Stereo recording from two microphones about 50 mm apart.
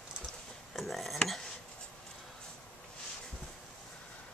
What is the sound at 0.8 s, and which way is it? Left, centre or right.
Dishes, centre.